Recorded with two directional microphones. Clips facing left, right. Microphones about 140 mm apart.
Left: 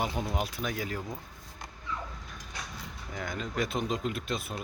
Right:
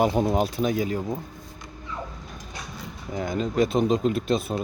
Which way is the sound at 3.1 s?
25° right (ahead or behind).